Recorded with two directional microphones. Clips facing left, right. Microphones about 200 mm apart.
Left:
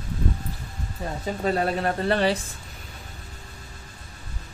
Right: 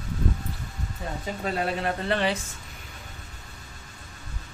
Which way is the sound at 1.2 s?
40° left (ahead or behind).